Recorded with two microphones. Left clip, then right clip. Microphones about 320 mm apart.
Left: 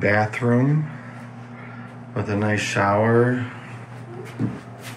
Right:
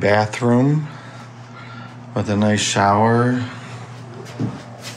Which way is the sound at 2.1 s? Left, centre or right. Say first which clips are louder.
Right 4 dB; centre.